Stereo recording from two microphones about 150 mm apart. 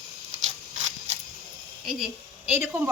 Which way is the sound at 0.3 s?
50° right (ahead or behind).